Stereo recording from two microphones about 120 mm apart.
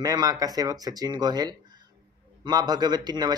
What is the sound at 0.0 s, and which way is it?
Speech, 30° right (ahead or behind).